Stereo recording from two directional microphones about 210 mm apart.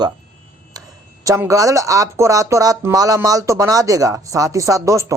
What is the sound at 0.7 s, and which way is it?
Tick-tock, 20° right (ahead or behind).